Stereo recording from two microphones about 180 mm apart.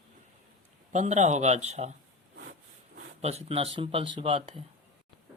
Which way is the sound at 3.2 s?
35° right (ahead or behind).